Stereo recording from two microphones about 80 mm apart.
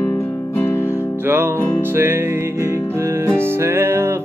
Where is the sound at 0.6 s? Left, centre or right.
Left.